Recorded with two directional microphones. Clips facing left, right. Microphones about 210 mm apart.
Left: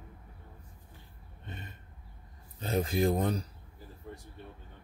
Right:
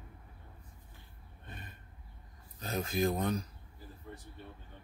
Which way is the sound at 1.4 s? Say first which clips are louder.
Left 4 dB; 25° left (ahead or behind).